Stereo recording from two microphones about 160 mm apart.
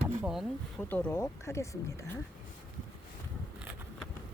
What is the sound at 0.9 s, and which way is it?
Speech, 15° left (ahead or behind).